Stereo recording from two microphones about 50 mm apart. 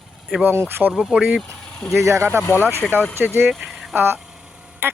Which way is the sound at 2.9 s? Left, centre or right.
Right.